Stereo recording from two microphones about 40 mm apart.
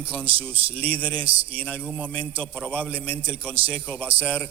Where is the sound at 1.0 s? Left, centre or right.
Left.